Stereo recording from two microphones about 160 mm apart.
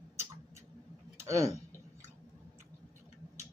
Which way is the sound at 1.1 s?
20° right (ahead or behind).